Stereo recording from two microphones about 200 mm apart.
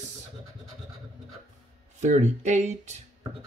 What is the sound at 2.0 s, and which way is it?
Speech, 35° right (ahead or behind).